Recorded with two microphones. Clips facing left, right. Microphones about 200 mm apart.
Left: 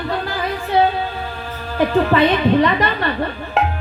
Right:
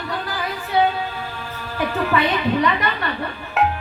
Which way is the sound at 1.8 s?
30° left (ahead or behind).